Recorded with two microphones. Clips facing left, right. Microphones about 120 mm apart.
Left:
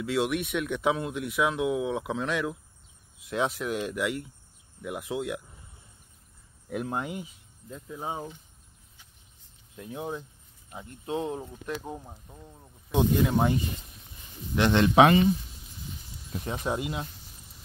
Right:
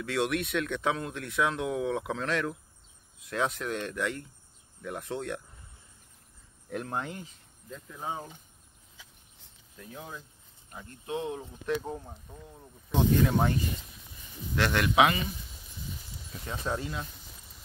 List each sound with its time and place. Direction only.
0.0 s speech: 5° left (ahead or behind)
6.7 s speech: 10° left (ahead or behind)
9.8 s speech: 25° left (ahead or behind)
11.6 s speech: 10° left (ahead or behind)
14.5 s speech: 20° left (ahead or behind)
16.3 s speech: 20° left (ahead or behind)